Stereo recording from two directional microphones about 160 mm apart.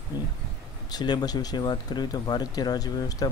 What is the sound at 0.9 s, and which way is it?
Speech, 25° left (ahead or behind).